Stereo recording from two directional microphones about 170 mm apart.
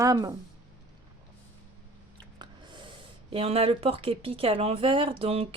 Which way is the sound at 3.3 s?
35° right (ahead or behind).